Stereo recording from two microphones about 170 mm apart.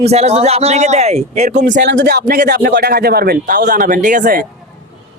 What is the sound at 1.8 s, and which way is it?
A man's voice, 90° right.